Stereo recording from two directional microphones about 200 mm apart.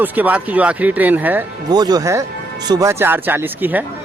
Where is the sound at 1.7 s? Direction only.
20° right (ahead or behind).